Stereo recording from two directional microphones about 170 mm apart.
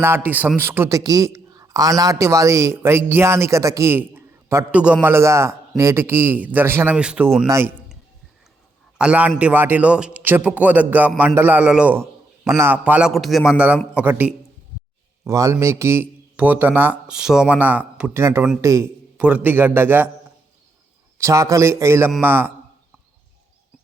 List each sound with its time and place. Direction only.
0.0 s a man's voice: 15° right (ahead or behind)
7.4 s a man's voice: 15° right (ahead or behind)
9.0 s a man's voice: 5° right (ahead or behind)
21.2 s a man's voice: 15° right (ahead or behind)